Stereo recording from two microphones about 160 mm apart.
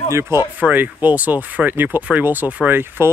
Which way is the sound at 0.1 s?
15° right (ahead or behind).